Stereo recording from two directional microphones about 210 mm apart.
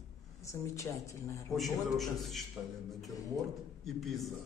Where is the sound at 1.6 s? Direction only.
Centre (ahead or behind).